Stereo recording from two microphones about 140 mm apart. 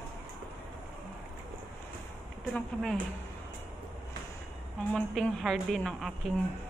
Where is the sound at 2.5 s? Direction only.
Centre (ahead or behind).